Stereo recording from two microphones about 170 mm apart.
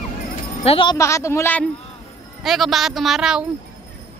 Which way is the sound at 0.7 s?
30° left (ahead or behind).